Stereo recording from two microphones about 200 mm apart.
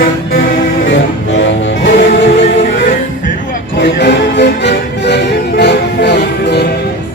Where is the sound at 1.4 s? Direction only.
60° left (ahead or behind).